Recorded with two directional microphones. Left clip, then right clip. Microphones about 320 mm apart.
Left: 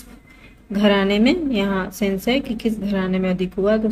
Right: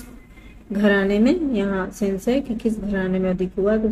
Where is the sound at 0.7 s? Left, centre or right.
Centre.